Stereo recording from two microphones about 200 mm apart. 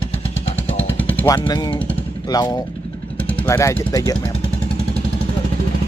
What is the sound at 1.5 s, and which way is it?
Speech, 20° left (ahead or behind).